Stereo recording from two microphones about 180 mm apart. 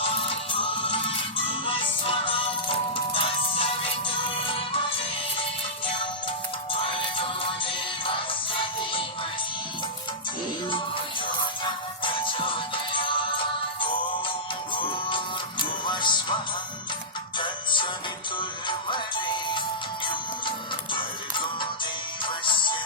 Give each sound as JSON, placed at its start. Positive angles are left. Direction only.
{"t": 0.0, "sound": "music", "side_deg": 30}
{"t": 10.7, "sound": "music", "side_deg": 25}
{"t": 17.3, "sound": "music", "side_deg": 25}
{"t": 20.9, "sound": "music", "side_deg": 25}